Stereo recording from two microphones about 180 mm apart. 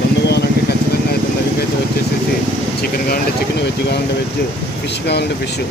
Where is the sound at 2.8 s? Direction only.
55° left (ahead or behind).